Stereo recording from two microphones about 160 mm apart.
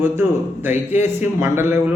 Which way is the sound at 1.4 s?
15° right (ahead or behind).